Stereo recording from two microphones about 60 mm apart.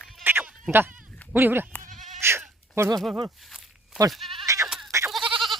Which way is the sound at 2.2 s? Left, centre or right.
Right.